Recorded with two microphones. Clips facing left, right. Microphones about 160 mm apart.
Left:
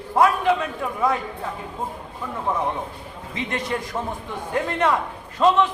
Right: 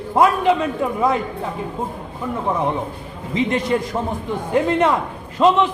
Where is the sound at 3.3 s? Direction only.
25° right (ahead or behind).